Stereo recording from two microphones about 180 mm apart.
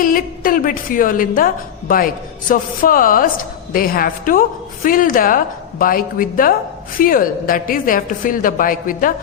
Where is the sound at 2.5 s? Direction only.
50° left (ahead or behind).